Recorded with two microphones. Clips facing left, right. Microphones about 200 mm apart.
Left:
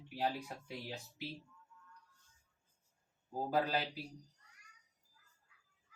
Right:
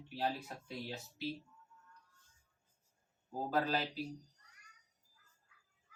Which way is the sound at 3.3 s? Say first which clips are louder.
Even; 10° left (ahead or behind).